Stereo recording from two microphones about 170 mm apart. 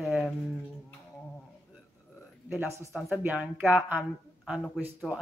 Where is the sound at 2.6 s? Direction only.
15° right (ahead or behind).